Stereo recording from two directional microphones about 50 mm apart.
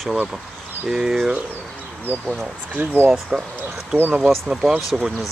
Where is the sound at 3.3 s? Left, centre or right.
Centre.